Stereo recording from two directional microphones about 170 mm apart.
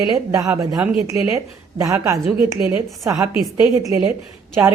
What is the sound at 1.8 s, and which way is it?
Speech, 20° right (ahead or behind).